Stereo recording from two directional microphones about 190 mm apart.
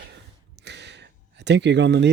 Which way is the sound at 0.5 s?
65° right (ahead or behind).